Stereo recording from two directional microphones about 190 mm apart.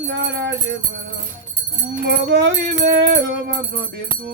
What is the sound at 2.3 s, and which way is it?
Music, 60° right (ahead or behind).